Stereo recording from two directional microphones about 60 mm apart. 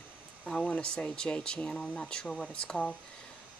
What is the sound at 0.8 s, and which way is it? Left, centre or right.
Speech, centre.